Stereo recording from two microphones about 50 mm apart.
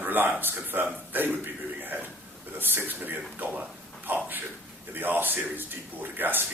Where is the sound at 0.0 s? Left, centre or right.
Right.